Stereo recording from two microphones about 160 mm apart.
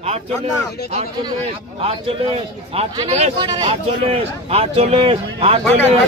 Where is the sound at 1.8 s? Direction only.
40° right (ahead or behind).